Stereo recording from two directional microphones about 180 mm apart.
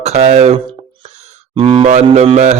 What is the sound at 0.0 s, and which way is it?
Speech, 40° right (ahead or behind).